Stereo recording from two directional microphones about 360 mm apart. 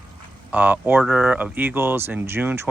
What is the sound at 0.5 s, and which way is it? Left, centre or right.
Speech, centre.